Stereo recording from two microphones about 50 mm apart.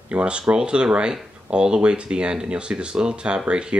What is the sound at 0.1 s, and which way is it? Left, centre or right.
Speech, right.